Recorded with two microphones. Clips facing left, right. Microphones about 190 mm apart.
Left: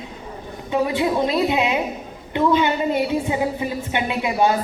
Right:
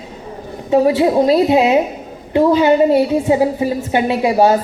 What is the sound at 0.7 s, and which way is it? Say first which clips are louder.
A woman's voice: right 8 dB; 35° right (ahead or behind).